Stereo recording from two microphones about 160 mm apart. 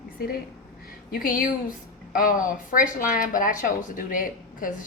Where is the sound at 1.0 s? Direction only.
60° left (ahead or behind).